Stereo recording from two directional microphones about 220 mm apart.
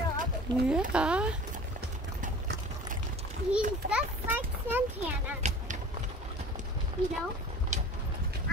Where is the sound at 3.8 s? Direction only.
40° right (ahead or behind).